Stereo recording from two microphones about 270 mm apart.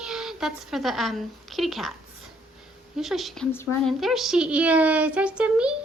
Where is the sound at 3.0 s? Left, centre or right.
Centre.